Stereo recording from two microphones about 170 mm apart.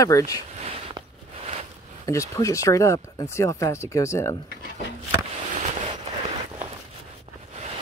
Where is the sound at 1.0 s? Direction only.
25° right (ahead or behind).